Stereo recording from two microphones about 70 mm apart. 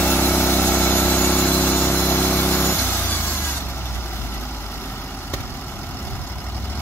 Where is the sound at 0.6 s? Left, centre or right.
Left.